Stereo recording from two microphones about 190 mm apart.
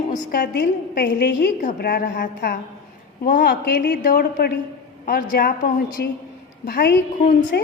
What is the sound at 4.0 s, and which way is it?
A woman's voice, 50° left (ahead or behind).